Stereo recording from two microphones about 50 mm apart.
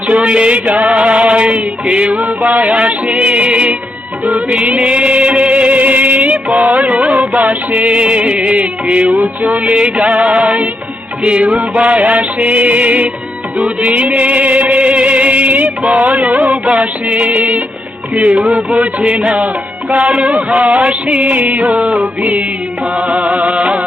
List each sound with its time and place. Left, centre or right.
0.1 s music: right